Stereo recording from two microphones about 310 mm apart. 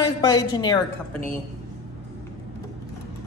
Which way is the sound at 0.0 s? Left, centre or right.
Centre.